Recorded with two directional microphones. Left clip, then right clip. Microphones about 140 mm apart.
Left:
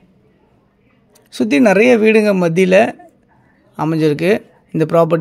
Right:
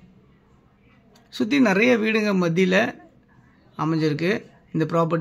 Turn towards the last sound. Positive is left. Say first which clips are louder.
# left 9 dB
turn(degrees=50)  # may be behind; listen again after turning